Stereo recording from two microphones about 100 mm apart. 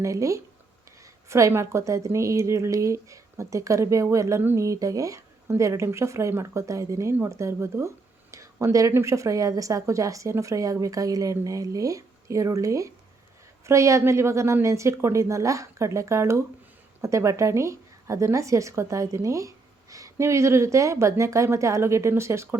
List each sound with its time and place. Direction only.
0.0 s a woman's voice: 30° right (ahead or behind)